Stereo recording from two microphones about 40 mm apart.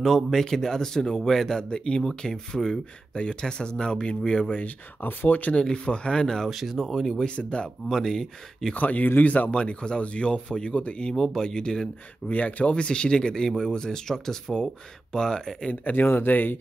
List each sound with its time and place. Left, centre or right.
0.0 s a man's voice: centre
1.6 s a man's voice: left
5.0 s speech: left
5.6 s speech: left
6.5 s speech: centre
7.2 s speech: left
7.9 s a man's voice: centre
8.7 s speech: left
9.5 s speech: left
11.1 s a man's voice: centre
12.3 s a man's voice: left; by 15.7 s centre
15.7 s speech: left
16.3 s speech: left